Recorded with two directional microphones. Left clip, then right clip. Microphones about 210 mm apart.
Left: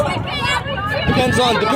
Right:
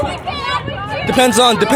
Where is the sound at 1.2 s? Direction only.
55° right (ahead or behind).